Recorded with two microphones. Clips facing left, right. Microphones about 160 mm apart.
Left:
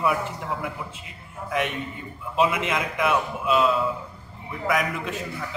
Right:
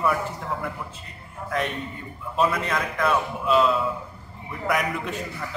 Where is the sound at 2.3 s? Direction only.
15° left (ahead or behind).